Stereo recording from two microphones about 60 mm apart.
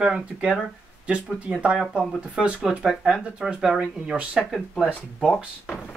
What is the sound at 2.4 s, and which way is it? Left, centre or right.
Speech, centre.